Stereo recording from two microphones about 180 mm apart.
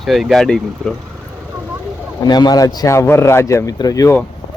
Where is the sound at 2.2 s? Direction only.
20° left (ahead or behind).